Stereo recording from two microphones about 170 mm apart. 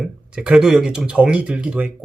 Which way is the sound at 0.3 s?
5° right (ahead or behind).